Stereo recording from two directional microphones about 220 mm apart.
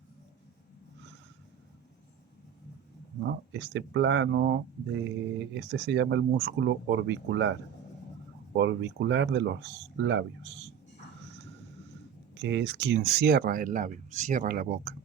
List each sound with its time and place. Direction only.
3.2 s speech: 50° right (ahead or behind)
8.5 s speech: 55° right (ahead or behind)
12.3 s speech: 55° right (ahead or behind)